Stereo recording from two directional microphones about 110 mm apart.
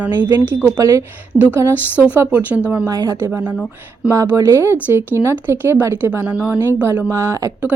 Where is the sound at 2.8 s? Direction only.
35° right (ahead or behind).